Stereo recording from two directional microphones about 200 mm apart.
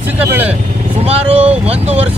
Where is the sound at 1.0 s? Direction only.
30° right (ahead or behind).